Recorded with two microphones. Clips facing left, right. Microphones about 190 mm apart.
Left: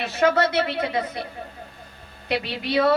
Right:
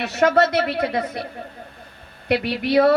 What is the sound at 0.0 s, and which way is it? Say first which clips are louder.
Speech: right 2 dB; 70° right (ahead or behind).